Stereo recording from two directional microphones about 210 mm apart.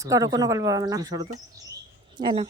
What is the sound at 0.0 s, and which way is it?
Speech, 15° right (ahead or behind).